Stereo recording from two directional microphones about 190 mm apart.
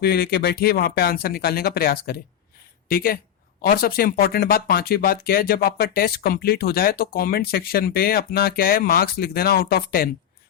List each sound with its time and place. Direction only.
0.0 s speech: 55° left (ahead or behind)